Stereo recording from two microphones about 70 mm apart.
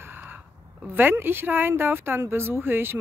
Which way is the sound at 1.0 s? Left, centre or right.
Right.